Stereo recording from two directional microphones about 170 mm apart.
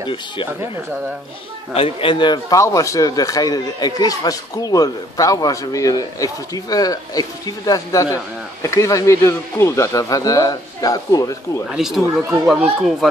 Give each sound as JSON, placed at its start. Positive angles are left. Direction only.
{"t": 0.0, "sound": "a man's voice", "side_deg": 30}
{"t": 1.7, "sound": "a man's voice", "side_deg": 35}
{"t": 11.7, "sound": "speech", "side_deg": -5}